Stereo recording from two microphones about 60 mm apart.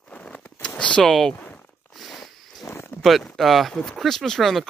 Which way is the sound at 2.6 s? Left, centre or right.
Left.